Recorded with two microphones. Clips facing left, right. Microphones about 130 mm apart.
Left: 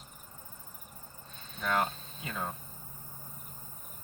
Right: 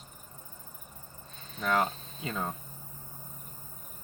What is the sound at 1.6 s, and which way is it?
Speech, 35° right (ahead or behind).